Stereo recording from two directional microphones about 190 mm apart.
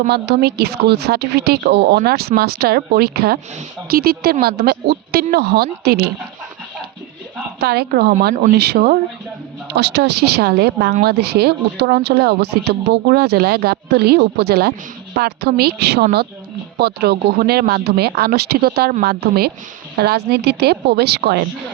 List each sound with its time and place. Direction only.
0.1 s speech: 60° right (ahead or behind)
7.6 s speech: 55° right (ahead or behind)